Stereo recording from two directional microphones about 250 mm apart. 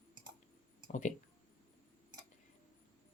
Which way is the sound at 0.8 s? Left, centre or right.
Left.